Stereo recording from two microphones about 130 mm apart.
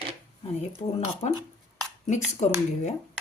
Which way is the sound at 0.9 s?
50° left (ahead or behind).